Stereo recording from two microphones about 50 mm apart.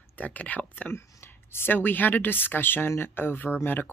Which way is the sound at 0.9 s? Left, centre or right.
Left.